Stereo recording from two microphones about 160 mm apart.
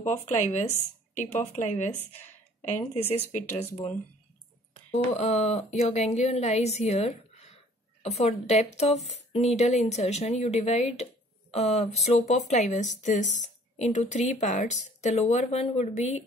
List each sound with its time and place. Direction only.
0.0 s speech: 50° left (ahead or behind)
4.9 s speech: 40° left (ahead or behind)